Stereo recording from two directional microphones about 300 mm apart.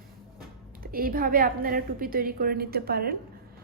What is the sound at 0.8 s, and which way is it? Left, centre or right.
A woman's voice, right.